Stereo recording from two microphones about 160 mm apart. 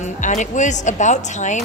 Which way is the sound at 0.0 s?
50° left (ahead or behind).